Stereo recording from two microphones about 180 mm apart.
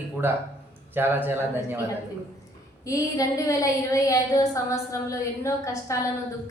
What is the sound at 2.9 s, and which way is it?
A woman's voice, 20° left (ahead or behind).